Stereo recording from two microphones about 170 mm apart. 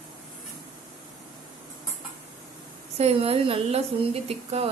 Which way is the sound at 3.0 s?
35° right (ahead or behind).